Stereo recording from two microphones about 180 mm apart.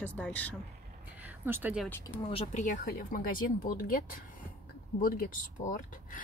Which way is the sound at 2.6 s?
50° left (ahead or behind).